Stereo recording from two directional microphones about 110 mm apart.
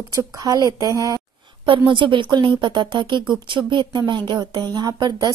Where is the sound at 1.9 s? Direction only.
50° right (ahead or behind).